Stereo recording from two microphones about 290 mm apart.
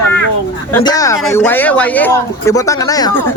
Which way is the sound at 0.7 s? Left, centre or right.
Centre.